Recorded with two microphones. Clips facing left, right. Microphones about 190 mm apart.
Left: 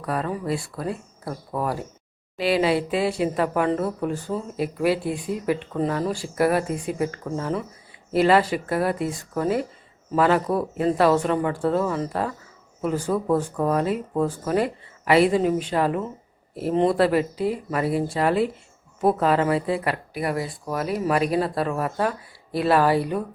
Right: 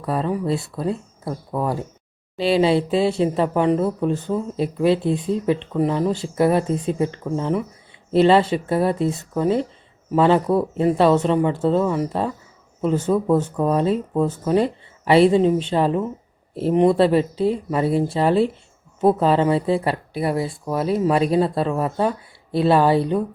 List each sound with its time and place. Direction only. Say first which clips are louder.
0.0 s speech: right 4 dB; 25° right (ahead or behind)